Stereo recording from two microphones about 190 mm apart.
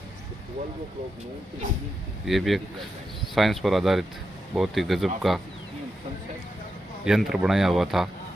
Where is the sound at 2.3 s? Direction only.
Centre (ahead or behind).